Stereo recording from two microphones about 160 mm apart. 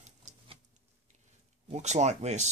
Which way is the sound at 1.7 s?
45° right (ahead or behind).